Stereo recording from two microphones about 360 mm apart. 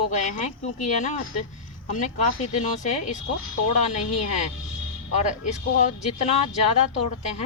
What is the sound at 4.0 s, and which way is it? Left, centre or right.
Speech, left.